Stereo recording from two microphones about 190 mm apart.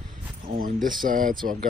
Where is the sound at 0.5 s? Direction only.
45° right (ahead or behind).